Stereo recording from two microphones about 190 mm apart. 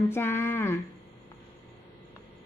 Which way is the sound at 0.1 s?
10° left (ahead or behind).